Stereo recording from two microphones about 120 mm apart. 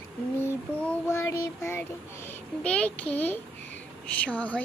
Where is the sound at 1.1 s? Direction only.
20° left (ahead or behind).